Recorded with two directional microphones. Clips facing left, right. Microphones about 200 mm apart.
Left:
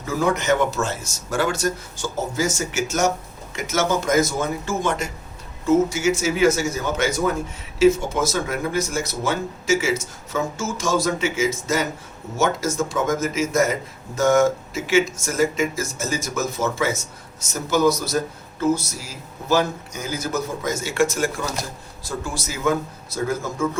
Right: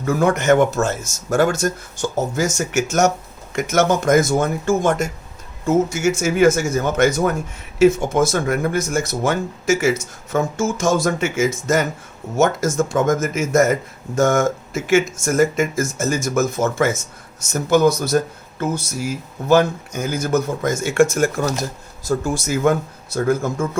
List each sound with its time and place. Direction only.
0.0 s a man's voice: 55° right (ahead or behind)
3.5 s a man's voice: 55° right (ahead or behind)